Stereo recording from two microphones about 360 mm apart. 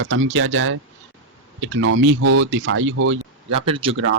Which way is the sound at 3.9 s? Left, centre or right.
Right.